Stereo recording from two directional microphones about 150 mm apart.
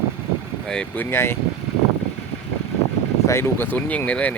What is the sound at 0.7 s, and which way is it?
Speech, 10° left (ahead or behind).